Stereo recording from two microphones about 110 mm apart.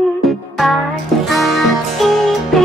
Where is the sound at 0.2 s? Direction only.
Centre (ahead or behind).